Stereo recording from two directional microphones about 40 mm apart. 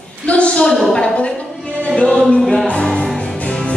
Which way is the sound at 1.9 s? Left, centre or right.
Left.